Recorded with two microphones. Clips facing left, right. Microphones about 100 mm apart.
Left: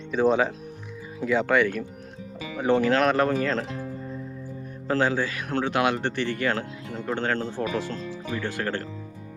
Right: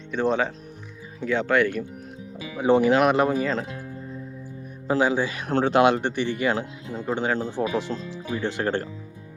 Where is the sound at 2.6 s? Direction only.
15° right (ahead or behind).